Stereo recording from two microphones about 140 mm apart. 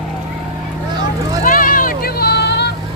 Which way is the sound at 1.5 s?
85° left.